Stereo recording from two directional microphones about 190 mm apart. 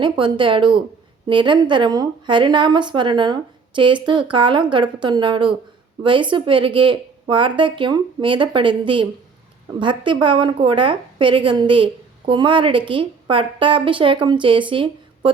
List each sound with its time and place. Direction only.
0.0 s a woman's voice: 25° right (ahead or behind)